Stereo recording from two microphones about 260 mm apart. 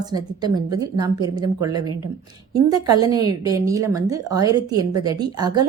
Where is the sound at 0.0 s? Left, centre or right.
Centre.